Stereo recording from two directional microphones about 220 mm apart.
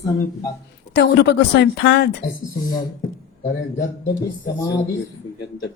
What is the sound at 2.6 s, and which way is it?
Speech, 40° left (ahead or behind).